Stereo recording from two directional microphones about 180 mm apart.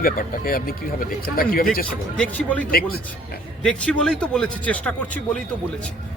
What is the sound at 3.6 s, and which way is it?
Speech, 5° left (ahead or behind).